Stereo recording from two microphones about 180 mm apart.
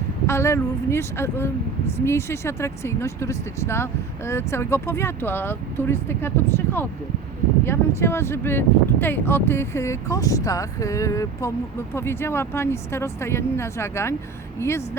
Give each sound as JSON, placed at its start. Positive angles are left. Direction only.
{"t": 0.3, "sound": "speech", "side_deg": 15}